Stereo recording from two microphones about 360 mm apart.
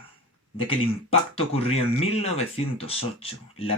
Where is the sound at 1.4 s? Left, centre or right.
Centre.